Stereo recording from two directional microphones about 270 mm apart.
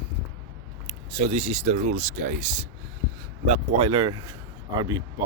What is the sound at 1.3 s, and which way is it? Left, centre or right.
Speech, right.